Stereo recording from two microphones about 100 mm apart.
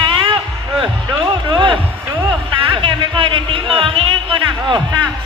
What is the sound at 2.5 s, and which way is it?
Music, 60° right (ahead or behind).